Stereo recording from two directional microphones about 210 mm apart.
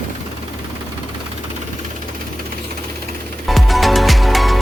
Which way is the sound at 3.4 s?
Centre (ahead or behind).